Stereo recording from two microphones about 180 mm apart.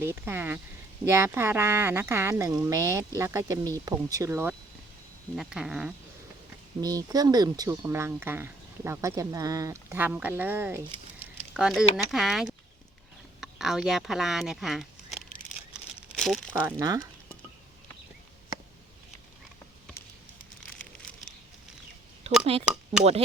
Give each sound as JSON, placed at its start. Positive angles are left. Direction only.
{"t": 0.0, "sound": "speech", "side_deg": -10}
{"t": 6.8, "sound": "speech", "side_deg": -20}
{"t": 16.0, "sound": "crumpling", "side_deg": 0}
{"t": 16.6, "sound": "speech", "side_deg": -15}
{"t": 22.3, "sound": "a sound", "side_deg": -35}
{"t": 22.6, "sound": "speech", "side_deg": -5}